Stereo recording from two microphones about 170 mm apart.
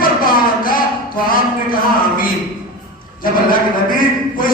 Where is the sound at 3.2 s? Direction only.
55° left (ahead or behind).